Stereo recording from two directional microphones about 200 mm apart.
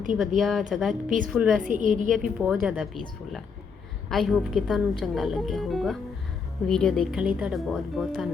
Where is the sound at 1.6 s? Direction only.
40° right (ahead or behind).